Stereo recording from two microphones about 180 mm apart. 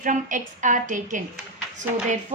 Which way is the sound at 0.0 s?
45° right (ahead or behind).